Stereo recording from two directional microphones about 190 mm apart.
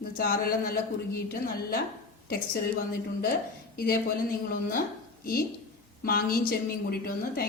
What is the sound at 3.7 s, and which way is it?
Speech, 50° left (ahead or behind).